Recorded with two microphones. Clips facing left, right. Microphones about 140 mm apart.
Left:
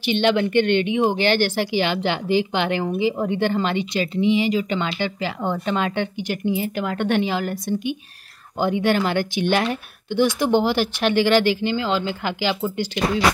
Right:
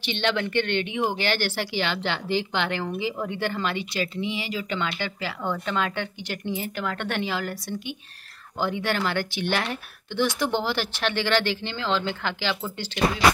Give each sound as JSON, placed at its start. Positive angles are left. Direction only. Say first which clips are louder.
{"t": 0.0, "sound": "speech", "louder": "left 7 dB", "side_deg": 15}